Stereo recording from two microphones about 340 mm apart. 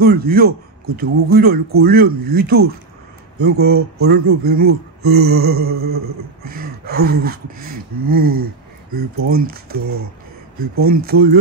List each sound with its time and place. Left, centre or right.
0.0 s speech: right
9.8 s speech: right
10.8 s speech: right